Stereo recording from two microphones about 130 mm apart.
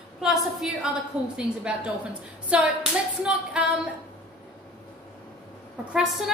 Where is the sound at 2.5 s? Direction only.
5° right (ahead or behind).